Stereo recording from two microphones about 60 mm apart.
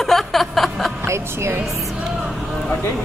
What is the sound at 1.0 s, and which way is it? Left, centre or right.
Speech, right.